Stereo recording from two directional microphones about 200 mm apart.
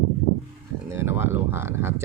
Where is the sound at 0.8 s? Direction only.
10° right (ahead or behind).